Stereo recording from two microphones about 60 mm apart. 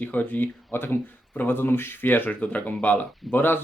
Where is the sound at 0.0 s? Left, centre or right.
Left.